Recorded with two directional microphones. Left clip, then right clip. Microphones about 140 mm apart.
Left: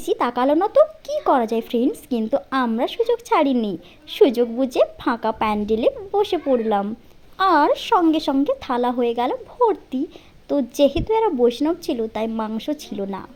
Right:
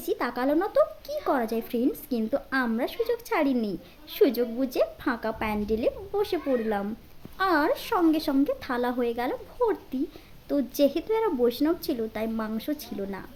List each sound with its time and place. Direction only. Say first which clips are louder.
0.0 s a woman's voice: left 8 dB; 40° left (ahead or behind)